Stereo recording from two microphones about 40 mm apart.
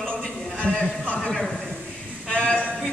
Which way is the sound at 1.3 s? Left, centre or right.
Centre.